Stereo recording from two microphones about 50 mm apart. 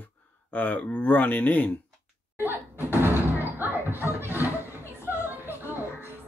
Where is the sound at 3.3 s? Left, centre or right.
Right.